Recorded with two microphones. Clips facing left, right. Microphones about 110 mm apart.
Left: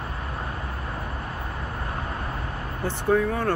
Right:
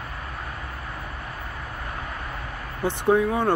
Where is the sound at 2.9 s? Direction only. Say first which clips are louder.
Right 2 dB; 15° right (ahead or behind).